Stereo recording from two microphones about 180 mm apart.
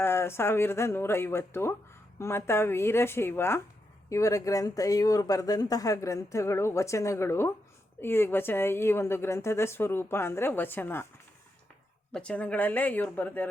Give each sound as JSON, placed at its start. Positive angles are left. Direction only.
{"t": 0.0, "sound": "speech", "side_deg": 15}
{"t": 12.1, "sound": "speech", "side_deg": 5}